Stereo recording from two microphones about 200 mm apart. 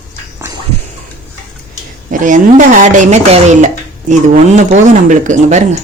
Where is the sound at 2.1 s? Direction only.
40° right (ahead or behind).